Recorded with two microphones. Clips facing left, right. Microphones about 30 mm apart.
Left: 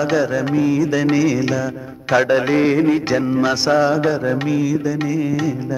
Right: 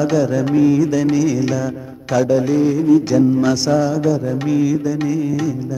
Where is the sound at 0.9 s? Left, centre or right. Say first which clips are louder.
Even; left.